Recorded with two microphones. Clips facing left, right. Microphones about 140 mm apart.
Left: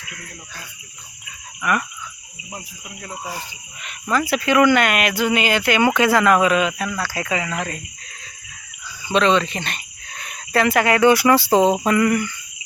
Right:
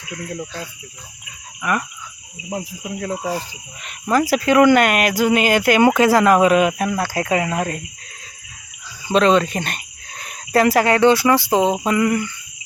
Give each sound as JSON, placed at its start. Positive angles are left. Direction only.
{"t": 2.5, "sound": "cricket", "side_deg": -75}
{"t": 3.2, "sound": "speech", "side_deg": -35}
{"t": 9.0, "sound": "speech", "side_deg": -40}
{"t": 11.9, "sound": "a sound", "side_deg": -15}